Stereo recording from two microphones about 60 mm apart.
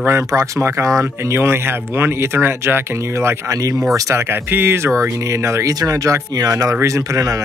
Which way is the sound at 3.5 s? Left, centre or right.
Right.